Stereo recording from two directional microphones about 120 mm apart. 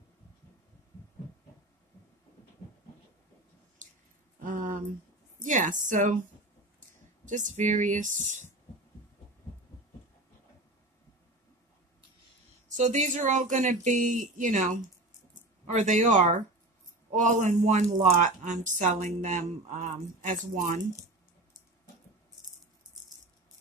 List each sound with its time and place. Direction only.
4.4 s a sound: 90° right
5.4 s speech: 90° right
12.6 s a man's voice: 90° right